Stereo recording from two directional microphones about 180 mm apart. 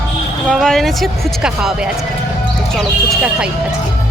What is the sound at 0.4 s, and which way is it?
Speech, centre (ahead or behind).